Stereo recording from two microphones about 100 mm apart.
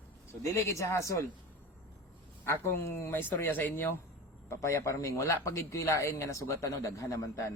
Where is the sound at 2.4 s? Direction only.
25° left (ahead or behind).